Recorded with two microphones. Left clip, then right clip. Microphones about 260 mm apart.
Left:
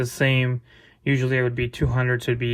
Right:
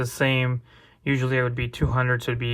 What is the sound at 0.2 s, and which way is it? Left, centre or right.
Speech, centre.